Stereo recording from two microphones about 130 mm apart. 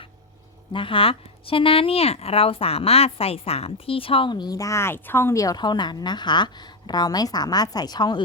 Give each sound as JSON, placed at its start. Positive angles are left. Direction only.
{"t": 0.7, "sound": "speech", "side_deg": 40}